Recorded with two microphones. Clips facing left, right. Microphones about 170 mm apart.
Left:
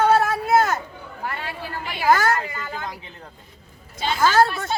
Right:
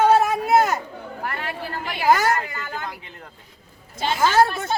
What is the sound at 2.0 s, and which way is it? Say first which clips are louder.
Speech: even; 15° right (ahead or behind).